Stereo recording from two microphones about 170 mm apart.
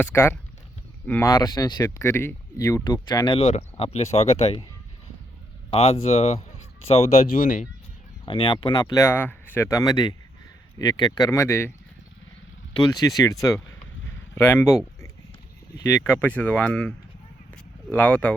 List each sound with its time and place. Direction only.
0.0 s speech: 15° left (ahead or behind)
1.3 s speech: 20° left (ahead or behind); by 4.6 s 40° left (ahead or behind)
5.7 s speech: 35° left (ahead or behind)
8.2 s speech: 30° left (ahead or behind)
12.9 s speech: 20° left (ahead or behind)
14.3 s speech: 15° left (ahead or behind)
16.1 s speech: 10° left (ahead or behind)
17.5 s a sound: 5° left (ahead or behind)